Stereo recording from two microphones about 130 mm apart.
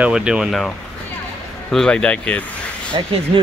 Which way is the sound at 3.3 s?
45° right (ahead or behind).